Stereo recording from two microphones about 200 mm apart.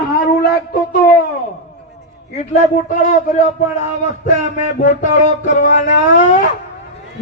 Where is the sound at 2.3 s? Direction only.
35° left (ahead or behind).